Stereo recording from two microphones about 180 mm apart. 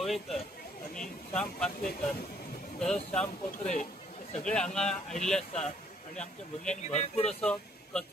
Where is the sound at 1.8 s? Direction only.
55° left (ahead or behind).